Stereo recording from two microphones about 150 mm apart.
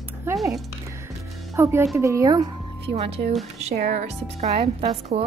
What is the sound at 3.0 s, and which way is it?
Speech, 40° right (ahead or behind).